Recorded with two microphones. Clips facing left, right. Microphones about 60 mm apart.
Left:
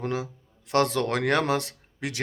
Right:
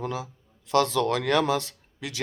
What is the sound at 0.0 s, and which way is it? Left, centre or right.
A man's voice, left.